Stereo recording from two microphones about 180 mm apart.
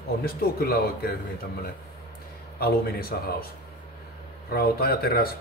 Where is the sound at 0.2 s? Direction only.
60° left (ahead or behind).